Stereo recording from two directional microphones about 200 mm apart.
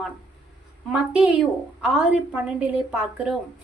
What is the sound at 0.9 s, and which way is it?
A woman's voice, 5° right (ahead or behind).